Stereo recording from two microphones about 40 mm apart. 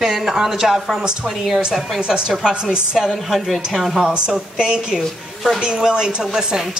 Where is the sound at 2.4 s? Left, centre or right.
Centre.